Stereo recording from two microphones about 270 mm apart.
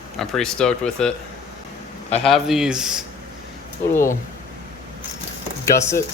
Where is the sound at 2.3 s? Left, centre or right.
Centre.